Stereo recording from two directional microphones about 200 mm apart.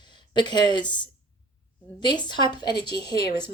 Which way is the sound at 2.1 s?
25° left (ahead or behind).